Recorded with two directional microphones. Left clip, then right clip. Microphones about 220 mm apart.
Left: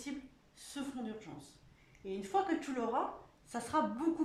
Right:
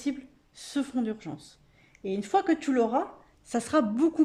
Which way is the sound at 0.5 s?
45° right (ahead or behind).